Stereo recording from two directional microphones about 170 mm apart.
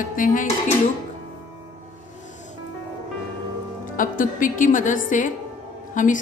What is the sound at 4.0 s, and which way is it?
A woman's voice, 50° left (ahead or behind).